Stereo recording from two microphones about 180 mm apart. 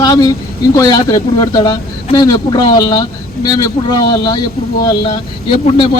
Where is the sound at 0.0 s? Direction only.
20° left (ahead or behind).